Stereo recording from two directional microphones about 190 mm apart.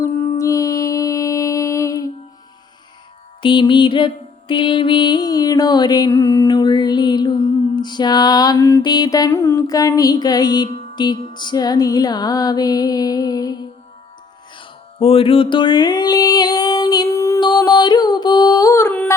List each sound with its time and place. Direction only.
0.0 s music: 15° left (ahead or behind)
3.4 s mantra: 25° left (ahead or behind)
14.9 s music: 30° left (ahead or behind); by 19.1 s 10° left (ahead or behind)